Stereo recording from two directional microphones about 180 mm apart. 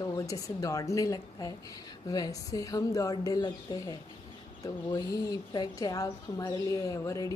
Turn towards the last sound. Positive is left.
turn(degrees=20)  # may be behind; listen again after turning